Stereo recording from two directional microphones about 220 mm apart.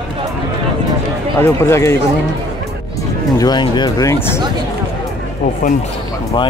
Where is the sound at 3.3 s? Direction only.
20° left (ahead or behind).